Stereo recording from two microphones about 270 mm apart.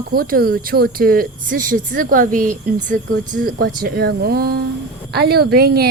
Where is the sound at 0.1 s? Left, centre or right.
Right.